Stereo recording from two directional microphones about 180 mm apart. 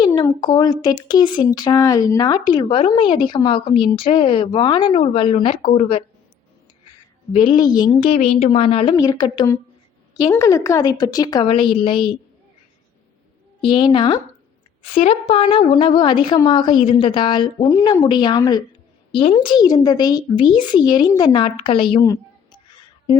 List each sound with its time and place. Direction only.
0.2 s speech: 25° left (ahead or behind)
7.3 s speech: 25° left (ahead or behind)
8.1 s speech: 40° left (ahead or behind)
13.6 s speech: 30° left (ahead or behind)
22.0 s a sound: 20° left (ahead or behind)